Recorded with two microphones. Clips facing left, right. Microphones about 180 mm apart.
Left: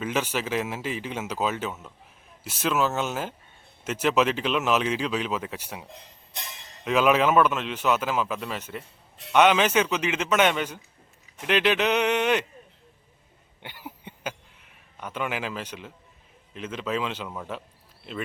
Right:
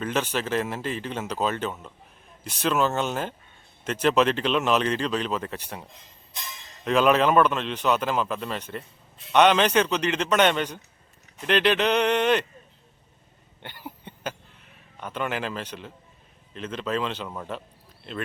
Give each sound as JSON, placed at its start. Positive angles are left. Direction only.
{"t": 0.0, "sound": "a man's voice", "side_deg": 10}
{"t": 5.9, "sound": "speech", "side_deg": 65}
{"t": 6.8, "sound": "a man's voice", "side_deg": 5}
{"t": 13.6, "sound": "a sound", "side_deg": 10}
{"t": 15.0, "sound": "a man's voice", "side_deg": 10}